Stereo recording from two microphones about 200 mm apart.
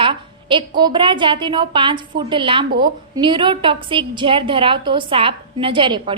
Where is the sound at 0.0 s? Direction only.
25° right (ahead or behind).